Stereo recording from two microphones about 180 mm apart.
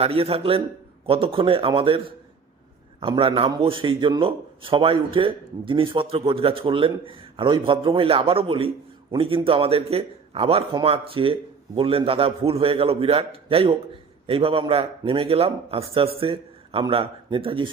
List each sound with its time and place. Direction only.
0.0 s a man's voice: 35° right (ahead or behind)